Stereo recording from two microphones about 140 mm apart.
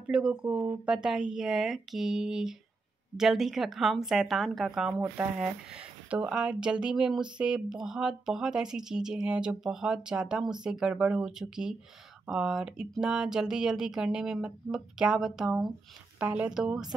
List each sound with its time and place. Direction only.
0.0 s speech: 5° right (ahead or behind)
5.0 s speech: 15° right (ahead or behind)